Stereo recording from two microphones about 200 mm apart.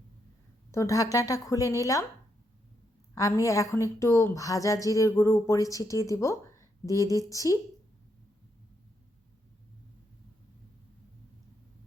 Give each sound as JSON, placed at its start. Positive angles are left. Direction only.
{"t": 0.7, "sound": "a woman's voice", "side_deg": 15}
{"t": 3.2, "sound": "a woman's voice", "side_deg": 15}